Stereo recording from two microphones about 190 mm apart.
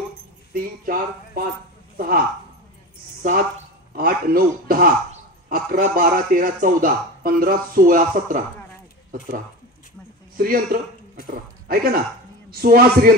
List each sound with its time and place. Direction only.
0.5 s a man's voice: 50° right (ahead or behind)
10.3 s a man's voice: 50° right (ahead or behind)